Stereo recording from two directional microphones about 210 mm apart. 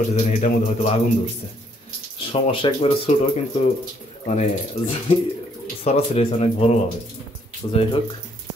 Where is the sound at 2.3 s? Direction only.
25° left (ahead or behind).